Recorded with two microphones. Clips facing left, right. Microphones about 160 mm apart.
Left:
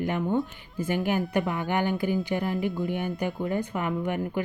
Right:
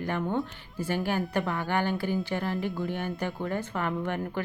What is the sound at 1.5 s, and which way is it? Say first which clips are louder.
Speech: left 2 dB; 20° left (ahead or behind).